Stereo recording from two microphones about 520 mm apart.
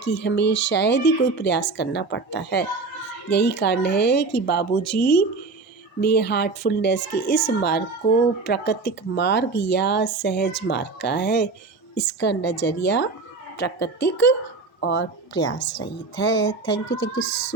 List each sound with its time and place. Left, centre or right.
0.0 s a woman's voice: centre
17.2 s speech: left